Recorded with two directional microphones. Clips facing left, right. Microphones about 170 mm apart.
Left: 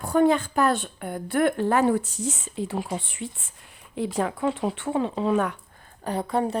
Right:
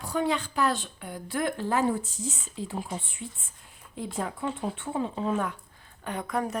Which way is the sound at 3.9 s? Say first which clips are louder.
Left 7 dB; 80° left.